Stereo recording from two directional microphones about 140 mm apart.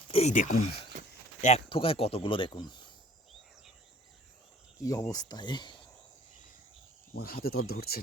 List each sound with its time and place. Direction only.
0.1 s a sound: 45° left (ahead or behind)
0.3 s speech: 60° left (ahead or behind)
0.9 s a sound: 65° right (ahead or behind)
1.4 s speech: 55° left (ahead or behind)
1.7 s speech: 40° left (ahead or behind)
4.8 s speech: 25° left (ahead or behind)
7.2 s speech: 90° left